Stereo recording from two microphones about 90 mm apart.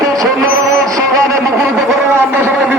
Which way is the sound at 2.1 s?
25° right (ahead or behind).